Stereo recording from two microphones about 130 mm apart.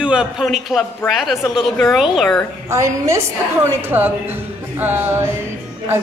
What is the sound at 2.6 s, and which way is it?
A woman's voice, 20° right (ahead or behind).